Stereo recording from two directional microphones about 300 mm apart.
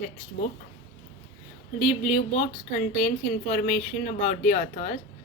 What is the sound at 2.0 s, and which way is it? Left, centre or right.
A woman's voice, left.